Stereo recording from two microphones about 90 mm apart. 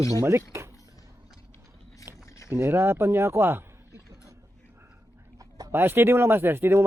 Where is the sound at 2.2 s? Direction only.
35° left (ahead or behind).